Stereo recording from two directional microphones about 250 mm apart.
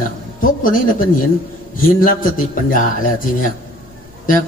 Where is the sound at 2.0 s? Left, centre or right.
Left.